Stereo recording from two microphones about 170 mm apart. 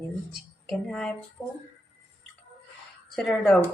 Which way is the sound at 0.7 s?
5° left (ahead or behind).